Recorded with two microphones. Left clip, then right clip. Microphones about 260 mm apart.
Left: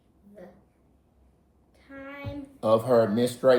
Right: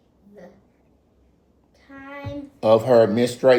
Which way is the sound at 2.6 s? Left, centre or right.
Right.